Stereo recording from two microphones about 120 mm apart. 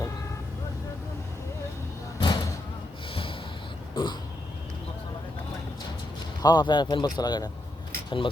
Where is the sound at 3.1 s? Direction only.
50° left (ahead or behind).